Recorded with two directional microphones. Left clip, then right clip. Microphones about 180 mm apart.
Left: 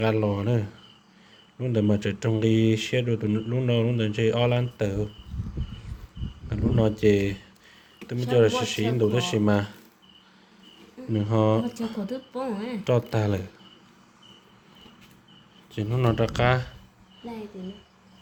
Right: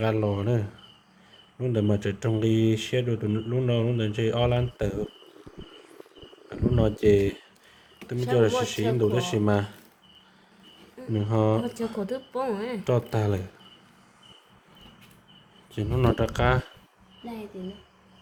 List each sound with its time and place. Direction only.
0.0 s speech: 5° right (ahead or behind)
6.5 s speech: 10° right (ahead or behind)
8.4 s speech: 10° right (ahead or behind)
11.1 s speech: 10° right (ahead or behind)
11.9 s a woman's voice: 55° right (ahead or behind)
12.8 s speech: 15° right (ahead or behind)
15.7 s speech: 20° right (ahead or behind)